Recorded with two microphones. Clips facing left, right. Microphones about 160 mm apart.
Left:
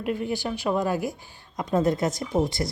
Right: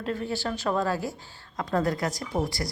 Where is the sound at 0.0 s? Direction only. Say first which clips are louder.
Left 2 dB; 15° left (ahead or behind).